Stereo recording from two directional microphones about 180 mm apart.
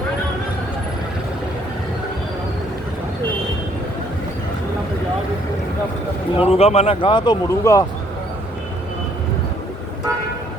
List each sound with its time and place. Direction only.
6.3 s speech: 35° left (ahead or behind); by 7.9 s 15° left (ahead or behind)